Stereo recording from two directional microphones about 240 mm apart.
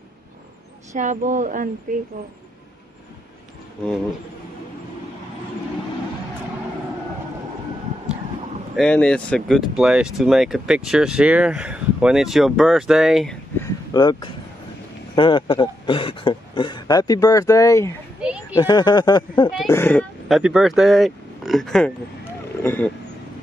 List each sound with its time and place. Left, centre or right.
0.9 s speech: right
8.7 s speech: centre
13.9 s speech: centre
19.7 s speech: centre